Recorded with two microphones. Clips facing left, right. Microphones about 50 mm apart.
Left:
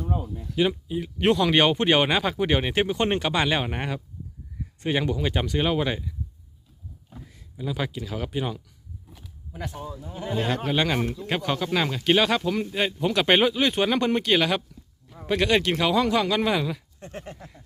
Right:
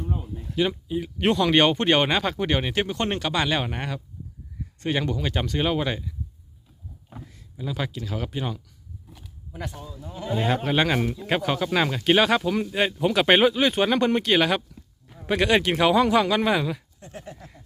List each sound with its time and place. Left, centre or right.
0.5 s speech: centre
7.1 s speech: right
7.5 s speech: centre
9.0 s a sound: centre
10.1 s a man's voice: centre
10.3 s speech: centre
17.0 s speech: left